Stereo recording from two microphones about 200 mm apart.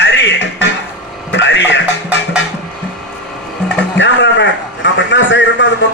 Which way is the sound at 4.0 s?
65° left (ahead or behind).